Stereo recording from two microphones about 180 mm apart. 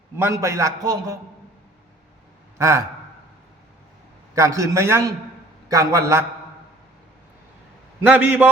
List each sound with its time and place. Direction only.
0.2 s a man's voice: 15° right (ahead or behind)
2.6 s a man's voice: 15° right (ahead or behind)
4.4 s a man's voice: 15° right (ahead or behind)
8.0 s a man's voice: 10° right (ahead or behind)